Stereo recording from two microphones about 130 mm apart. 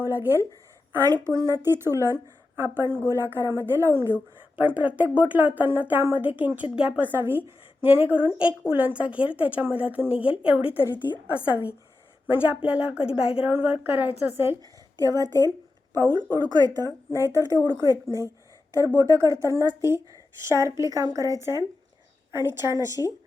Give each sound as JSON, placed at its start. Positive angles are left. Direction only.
{"t": 0.0, "sound": "a woman's voice", "side_deg": -20}
{"t": 14.9, "sound": "a woman's voice", "side_deg": -30}
{"t": 17.1, "sound": "speech", "side_deg": 20}
{"t": 17.3, "sound": "a woman's voice", "side_deg": -25}